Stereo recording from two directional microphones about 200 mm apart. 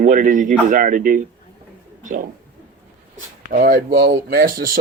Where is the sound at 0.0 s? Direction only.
40° right (ahead or behind).